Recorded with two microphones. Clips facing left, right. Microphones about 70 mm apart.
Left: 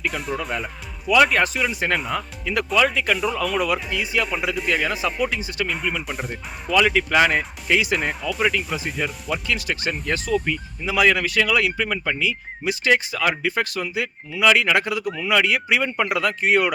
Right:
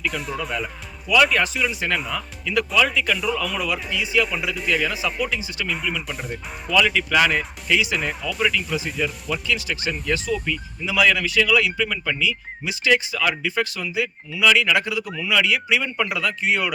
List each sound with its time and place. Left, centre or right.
0.1 s speech: centre
1.0 s speech: left
6.1 s speech: centre
6.7 s speech: left
8.2 s speech: centre
8.4 s speech: left